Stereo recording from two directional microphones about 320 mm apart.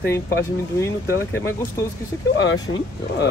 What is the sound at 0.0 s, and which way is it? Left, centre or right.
Speech, centre.